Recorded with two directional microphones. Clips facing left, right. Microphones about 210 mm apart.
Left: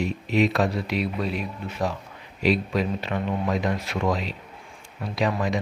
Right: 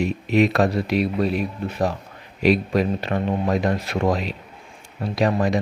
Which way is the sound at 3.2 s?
35° right (ahead or behind).